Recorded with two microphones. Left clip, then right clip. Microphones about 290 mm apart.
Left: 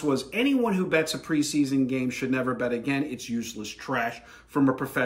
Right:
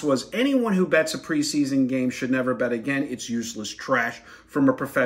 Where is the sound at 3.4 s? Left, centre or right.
Left.